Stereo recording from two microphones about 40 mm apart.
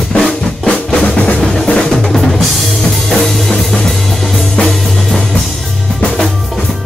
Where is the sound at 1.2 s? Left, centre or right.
Left.